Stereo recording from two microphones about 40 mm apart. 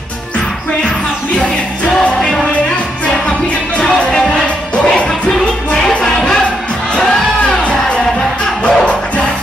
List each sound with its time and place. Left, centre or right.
4.4 s music: left
7.6 s music: left